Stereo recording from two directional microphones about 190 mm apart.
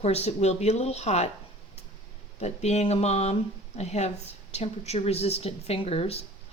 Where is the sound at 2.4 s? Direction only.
35° left (ahead or behind).